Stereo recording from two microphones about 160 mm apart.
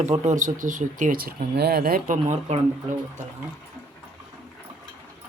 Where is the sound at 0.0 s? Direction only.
50° right (ahead or behind); by 2.1 s 70° right (ahead or behind).